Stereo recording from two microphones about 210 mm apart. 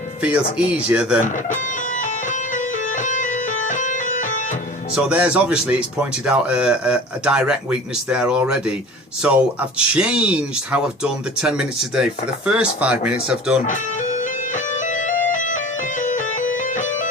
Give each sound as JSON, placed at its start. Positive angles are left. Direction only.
{"t": 0.2, "sound": "speech", "side_deg": -5}
{"t": 2.0, "sound": "music", "side_deg": 35}
{"t": 4.9, "sound": "speech", "side_deg": -5}
{"t": 13.7, "sound": "music", "side_deg": 35}